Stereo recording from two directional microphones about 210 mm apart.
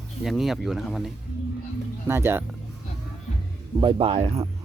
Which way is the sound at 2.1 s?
10° right (ahead or behind).